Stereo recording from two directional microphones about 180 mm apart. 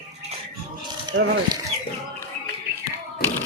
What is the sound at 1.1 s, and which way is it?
Speech, 90° right.